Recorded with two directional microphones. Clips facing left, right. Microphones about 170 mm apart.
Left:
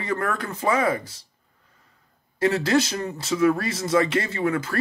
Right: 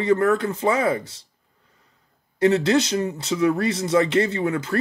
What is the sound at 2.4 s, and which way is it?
Speech, 25° right (ahead or behind).